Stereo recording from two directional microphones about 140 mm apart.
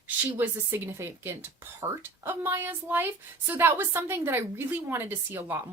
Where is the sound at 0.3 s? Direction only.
15° right (ahead or behind).